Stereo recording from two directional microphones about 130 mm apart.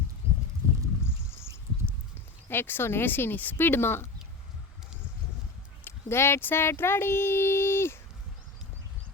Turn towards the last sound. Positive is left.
turn(degrees=20)  # may be behind; listen again after turning